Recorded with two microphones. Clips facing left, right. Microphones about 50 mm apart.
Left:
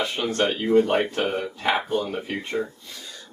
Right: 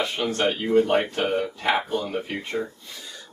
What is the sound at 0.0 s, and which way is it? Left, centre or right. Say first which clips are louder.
Speech: even; centre.